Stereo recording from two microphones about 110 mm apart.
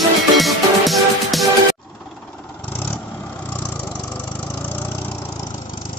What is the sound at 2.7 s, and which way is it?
Vehicle, 15° left (ahead or behind).